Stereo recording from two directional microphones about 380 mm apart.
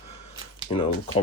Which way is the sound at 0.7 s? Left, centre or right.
Centre.